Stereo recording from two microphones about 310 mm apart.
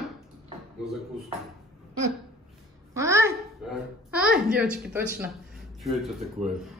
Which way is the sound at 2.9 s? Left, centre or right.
Centre.